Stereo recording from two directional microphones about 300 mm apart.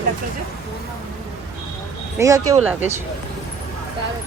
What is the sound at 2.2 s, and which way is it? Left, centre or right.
Speech, centre.